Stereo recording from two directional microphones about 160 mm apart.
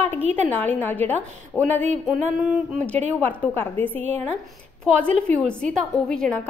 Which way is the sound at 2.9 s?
10° left (ahead or behind).